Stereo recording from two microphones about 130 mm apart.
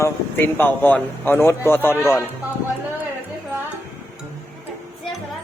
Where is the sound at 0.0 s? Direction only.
15° left (ahead or behind).